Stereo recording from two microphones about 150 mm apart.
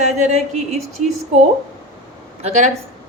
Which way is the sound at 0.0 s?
50° right (ahead or behind).